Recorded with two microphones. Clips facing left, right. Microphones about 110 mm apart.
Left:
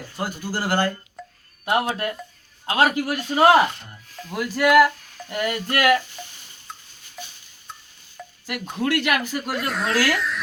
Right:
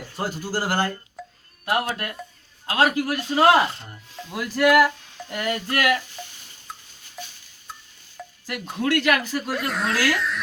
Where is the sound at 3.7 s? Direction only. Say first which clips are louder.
Even; 25° right (ahead or behind).